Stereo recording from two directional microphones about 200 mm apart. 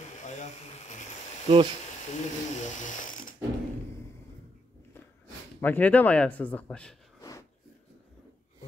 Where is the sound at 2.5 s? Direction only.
40° left (ahead or behind).